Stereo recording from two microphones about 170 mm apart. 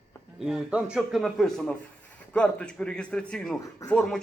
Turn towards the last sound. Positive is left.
turn(degrees=5)  # may be behind; listen again after turning